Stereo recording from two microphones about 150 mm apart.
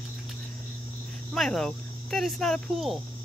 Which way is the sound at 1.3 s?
5° left (ahead or behind).